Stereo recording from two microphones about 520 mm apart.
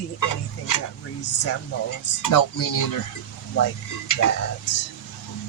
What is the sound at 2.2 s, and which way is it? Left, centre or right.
Speech, left.